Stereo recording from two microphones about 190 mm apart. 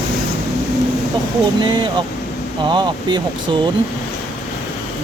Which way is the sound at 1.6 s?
25° right (ahead or behind).